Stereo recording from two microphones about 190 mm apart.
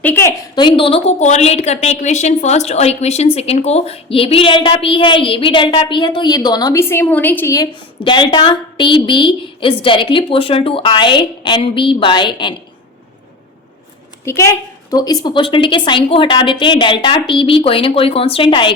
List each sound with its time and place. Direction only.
0.0 s a sound: 10° left (ahead or behind)
0.6 s a woman's voice: 30° left (ahead or behind)
14.3 s a woman's voice: 15° left (ahead or behind)